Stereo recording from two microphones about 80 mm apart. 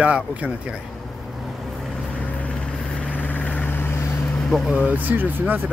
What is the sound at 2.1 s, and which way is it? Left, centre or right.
Vehicle, centre.